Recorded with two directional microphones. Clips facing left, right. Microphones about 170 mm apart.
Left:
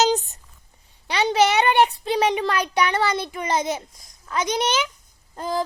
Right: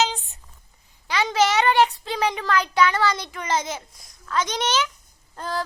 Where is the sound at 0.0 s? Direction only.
40° left (ahead or behind).